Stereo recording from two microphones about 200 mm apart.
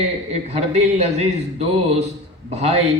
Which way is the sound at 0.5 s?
30° right (ahead or behind).